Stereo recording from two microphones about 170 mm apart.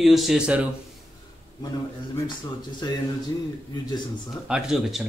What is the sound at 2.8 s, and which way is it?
Speech, 25° left (ahead or behind).